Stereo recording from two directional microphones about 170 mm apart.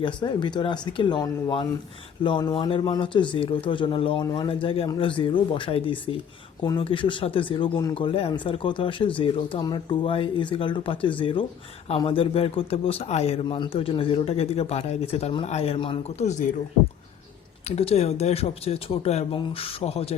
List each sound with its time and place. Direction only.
0.0 s a man's voice: 30° left (ahead or behind)
17.7 s a man's voice: 35° left (ahead or behind)